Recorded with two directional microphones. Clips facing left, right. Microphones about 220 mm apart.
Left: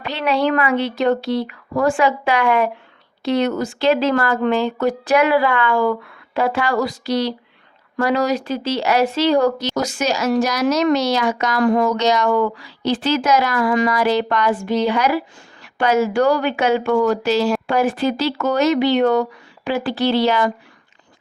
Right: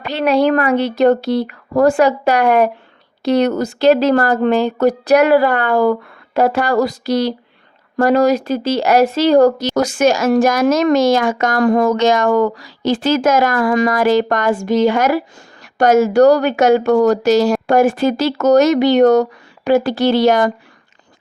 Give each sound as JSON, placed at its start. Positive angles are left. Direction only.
{"t": 0.0, "sound": "speech", "side_deg": -45}